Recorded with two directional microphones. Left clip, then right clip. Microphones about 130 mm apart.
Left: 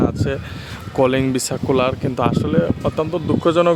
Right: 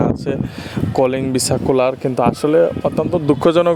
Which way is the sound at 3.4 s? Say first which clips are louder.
Right 1 dB; 60° right (ahead or behind).